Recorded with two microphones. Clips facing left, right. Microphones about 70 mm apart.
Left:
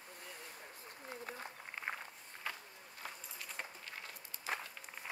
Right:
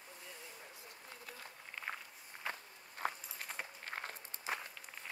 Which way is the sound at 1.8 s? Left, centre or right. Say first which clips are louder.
Left 1 dB; centre.